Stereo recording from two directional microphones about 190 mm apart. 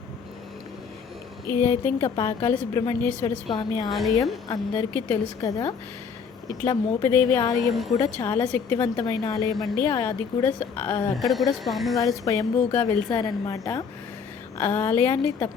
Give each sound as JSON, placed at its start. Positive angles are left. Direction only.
{"t": 1.5, "sound": "a woman's voice", "side_deg": 15}
{"t": 3.5, "sound": "a woman's voice", "side_deg": 20}
{"t": 3.8, "sound": "speech", "side_deg": 0}
{"t": 4.4, "sound": "a woman's voice", "side_deg": 20}
{"t": 7.7, "sound": "speech", "side_deg": 0}
{"t": 7.9, "sound": "a woman's voice", "side_deg": 15}
{"t": 11.2, "sound": "speech", "side_deg": 0}
{"t": 11.9, "sound": "a woman's voice", "side_deg": 15}